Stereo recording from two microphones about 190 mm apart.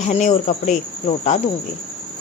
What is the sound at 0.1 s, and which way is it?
Speech, 40° left (ahead or behind).